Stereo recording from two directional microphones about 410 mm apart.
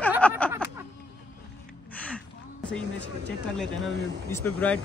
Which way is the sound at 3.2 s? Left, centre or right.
Centre.